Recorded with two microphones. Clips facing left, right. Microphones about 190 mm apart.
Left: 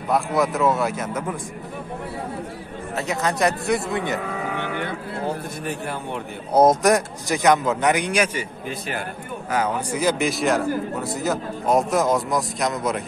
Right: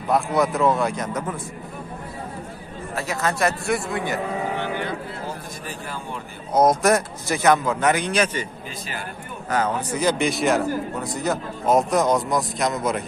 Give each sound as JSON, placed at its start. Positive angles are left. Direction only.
{"t": 0.1, "sound": "a man's voice", "side_deg": 0}
{"t": 3.0, "sound": "a man's voice", "side_deg": 20}
{"t": 4.6, "sound": "music", "side_deg": 55}
{"t": 6.5, "sound": "a man's voice", "side_deg": 25}
{"t": 6.8, "sound": "a man's voice", "side_deg": 15}
{"t": 9.5, "sound": "a man's voice", "side_deg": 10}